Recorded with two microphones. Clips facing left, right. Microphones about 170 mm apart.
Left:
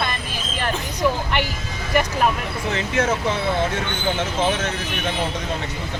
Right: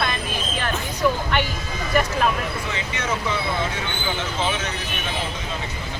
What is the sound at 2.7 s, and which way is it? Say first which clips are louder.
Speech: left 7 dB; 50° left (ahead or behind).